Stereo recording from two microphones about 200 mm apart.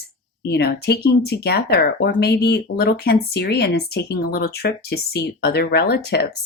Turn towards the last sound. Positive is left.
turn(degrees=55)  # may be behind; listen again after turning